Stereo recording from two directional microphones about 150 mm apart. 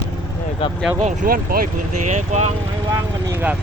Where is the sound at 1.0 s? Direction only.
60° right (ahead or behind).